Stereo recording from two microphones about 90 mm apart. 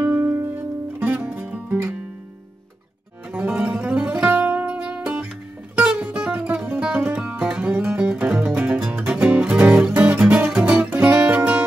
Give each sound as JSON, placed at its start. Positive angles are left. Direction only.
{"t": 0.0, "sound": "music", "side_deg": -25}
{"t": 3.3, "sound": "music", "side_deg": -15}